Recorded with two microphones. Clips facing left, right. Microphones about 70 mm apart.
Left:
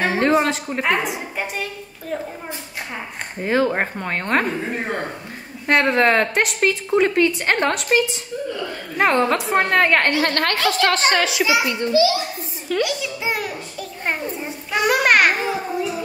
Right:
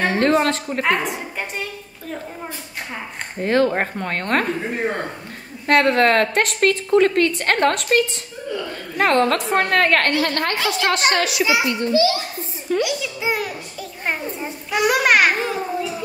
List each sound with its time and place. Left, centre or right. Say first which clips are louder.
0.0 s a woman's voice: even; centre
3.4 s a woman's voice: right 1 dB; centre
5.7 s a woman's voice: right 1 dB; centre
10.2 s a woman's voice: left 1 dB; left
11.0 s a child's voice: left 1 dB; left
11.4 s a child's voice: even; right
12.8 s a sound: right 1 dB; centre
14.7 s babbling: even; centre
15.2 s children playing: even; centre